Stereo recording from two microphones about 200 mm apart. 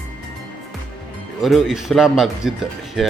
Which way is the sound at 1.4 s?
Centre (ahead or behind).